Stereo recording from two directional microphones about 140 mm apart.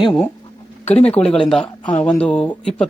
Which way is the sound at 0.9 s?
50° left (ahead or behind).